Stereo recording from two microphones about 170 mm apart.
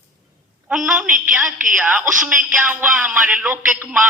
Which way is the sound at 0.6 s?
5° right (ahead or behind).